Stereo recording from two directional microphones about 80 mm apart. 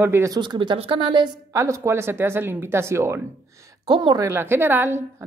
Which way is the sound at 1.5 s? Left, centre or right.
Right.